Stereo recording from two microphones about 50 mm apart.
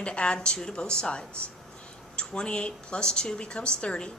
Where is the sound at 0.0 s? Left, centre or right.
Centre.